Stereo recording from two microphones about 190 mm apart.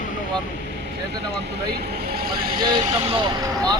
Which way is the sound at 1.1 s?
60° right (ahead or behind).